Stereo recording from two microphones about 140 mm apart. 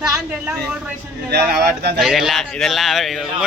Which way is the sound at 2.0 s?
Centre (ahead or behind).